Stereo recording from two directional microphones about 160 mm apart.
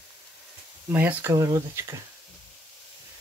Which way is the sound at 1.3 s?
25° right (ahead or behind).